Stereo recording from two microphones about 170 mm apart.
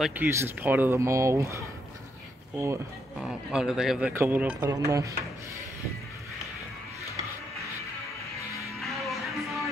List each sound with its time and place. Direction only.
0.0 s speech: 10° right (ahead or behind)
3.2 s a man's voice: 5° right (ahead or behind)
8.7 s music: centre (ahead or behind)